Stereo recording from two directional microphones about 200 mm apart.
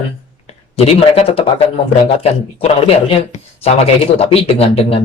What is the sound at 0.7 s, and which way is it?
Speech, 30° left (ahead or behind).